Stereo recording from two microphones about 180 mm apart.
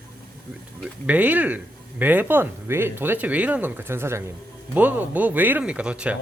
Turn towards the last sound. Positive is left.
turn(degrees=-5)  # may be behind; listen again after turning